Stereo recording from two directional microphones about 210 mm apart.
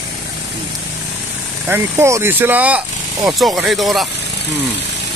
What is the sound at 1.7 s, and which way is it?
Speech, 10° right (ahead or behind).